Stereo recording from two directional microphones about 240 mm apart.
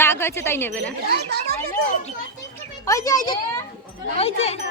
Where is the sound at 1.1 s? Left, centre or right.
Right.